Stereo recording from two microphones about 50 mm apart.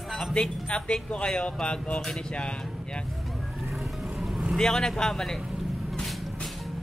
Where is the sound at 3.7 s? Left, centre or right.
Centre.